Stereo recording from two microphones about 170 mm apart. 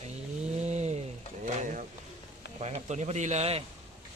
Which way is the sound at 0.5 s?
40° right (ahead or behind).